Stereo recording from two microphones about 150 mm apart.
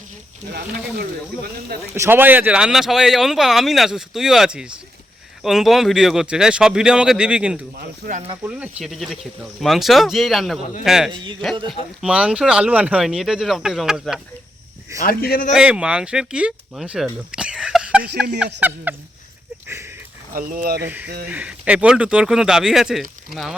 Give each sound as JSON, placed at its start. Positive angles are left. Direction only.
{"t": 2.0, "sound": "speech", "side_deg": -15}
{"t": 7.8, "sound": "speech", "side_deg": -70}
{"t": 8.4, "sound": "speech", "side_deg": -10}
{"t": 11.1, "sound": "a man's voice", "side_deg": -35}
{"t": 11.7, "sound": "speech", "side_deg": -5}
{"t": 15.0, "sound": "a man's voice", "side_deg": 85}
{"t": 15.5, "sound": "speech", "side_deg": -5}
{"t": 19.6, "sound": "a sound", "side_deg": -15}
{"t": 20.3, "sound": "speech", "side_deg": -65}
{"t": 20.8, "sound": "speech", "side_deg": -10}